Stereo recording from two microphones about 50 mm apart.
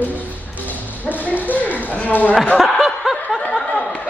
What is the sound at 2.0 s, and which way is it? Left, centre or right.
Speech, left.